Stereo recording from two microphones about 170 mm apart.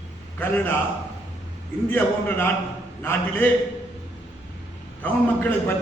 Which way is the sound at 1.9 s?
10° left (ahead or behind).